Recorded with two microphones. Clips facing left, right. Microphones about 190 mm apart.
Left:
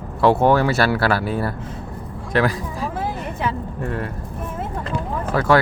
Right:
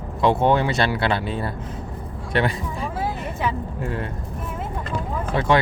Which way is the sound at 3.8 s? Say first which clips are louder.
Left 2 dB; 25° right (ahead or behind).